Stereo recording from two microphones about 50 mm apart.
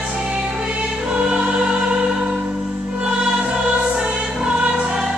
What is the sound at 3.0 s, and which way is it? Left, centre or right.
Music, centre.